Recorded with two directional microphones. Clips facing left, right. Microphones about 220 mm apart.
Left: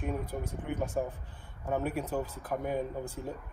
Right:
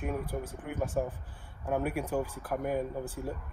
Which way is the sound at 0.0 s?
5° right (ahead or behind).